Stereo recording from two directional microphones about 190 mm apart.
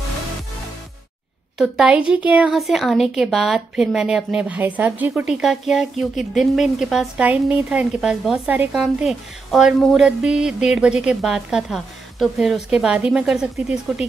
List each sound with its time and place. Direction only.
1.6 s a woman's voice: 5° right (ahead or behind)